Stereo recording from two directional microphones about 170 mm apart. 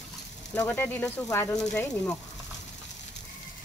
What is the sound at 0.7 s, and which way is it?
Speech, 10° left (ahead or behind).